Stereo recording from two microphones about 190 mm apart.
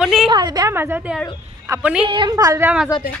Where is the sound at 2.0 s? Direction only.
25° right (ahead or behind); by 2.8 s 10° right (ahead or behind).